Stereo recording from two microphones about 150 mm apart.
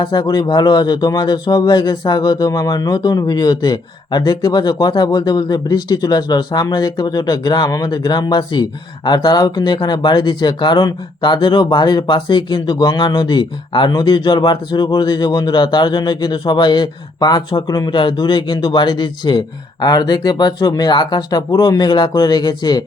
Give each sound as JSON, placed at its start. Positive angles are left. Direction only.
{"t": 0.0, "sound": "speech", "side_deg": 30}